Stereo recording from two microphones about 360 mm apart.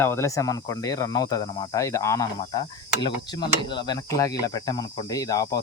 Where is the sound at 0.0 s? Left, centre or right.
Centre.